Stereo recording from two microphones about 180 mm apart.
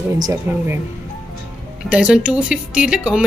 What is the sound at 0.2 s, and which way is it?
Speech, 15° right (ahead or behind).